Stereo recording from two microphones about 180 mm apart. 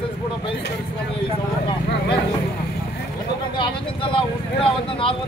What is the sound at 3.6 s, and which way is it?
Speech, 30° left (ahead or behind).